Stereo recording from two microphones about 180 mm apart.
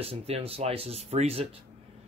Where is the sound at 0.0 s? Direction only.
35° right (ahead or behind).